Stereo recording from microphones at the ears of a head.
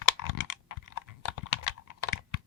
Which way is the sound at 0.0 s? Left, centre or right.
Left.